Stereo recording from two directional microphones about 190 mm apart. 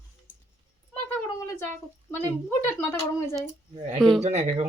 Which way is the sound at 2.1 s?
10° left (ahead or behind).